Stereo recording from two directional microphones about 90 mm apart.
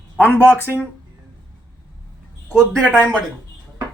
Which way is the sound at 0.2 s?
20° left (ahead or behind).